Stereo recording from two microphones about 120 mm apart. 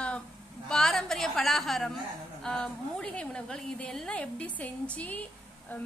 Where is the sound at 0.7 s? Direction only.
5° left (ahead or behind).